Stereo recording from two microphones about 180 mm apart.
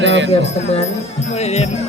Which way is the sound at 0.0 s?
90° right.